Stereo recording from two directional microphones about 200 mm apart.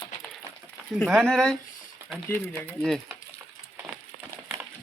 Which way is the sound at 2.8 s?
Centre (ahead or behind).